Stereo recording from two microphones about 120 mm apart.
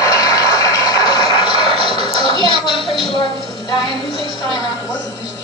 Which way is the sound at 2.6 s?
45° left (ahead or behind).